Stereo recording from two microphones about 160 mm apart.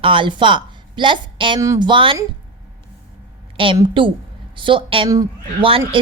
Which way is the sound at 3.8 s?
30° right (ahead or behind).